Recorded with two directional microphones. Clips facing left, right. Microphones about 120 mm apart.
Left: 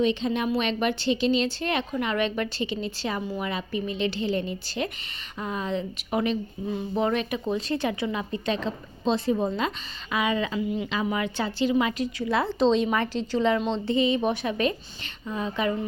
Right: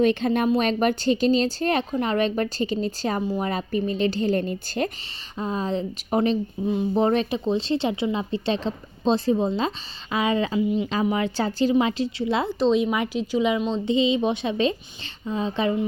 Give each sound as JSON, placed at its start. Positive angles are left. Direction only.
{"t": 0.0, "sound": "speech", "side_deg": -55}
{"t": 0.4, "sound": "speech", "side_deg": -40}
{"t": 5.4, "sound": "speech", "side_deg": -30}
{"t": 12.5, "sound": "speech", "side_deg": -5}